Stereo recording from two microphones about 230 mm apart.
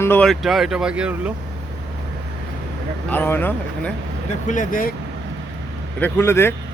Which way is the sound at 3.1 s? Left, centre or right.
Centre.